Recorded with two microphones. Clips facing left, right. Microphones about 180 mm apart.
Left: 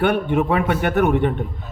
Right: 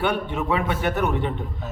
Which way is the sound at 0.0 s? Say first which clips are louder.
Left 6 dB; 55° left (ahead or behind).